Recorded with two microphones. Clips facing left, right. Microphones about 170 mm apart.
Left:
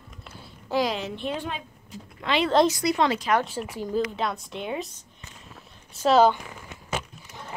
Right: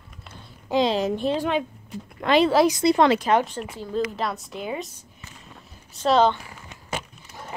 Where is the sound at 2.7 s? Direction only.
25° right (ahead or behind).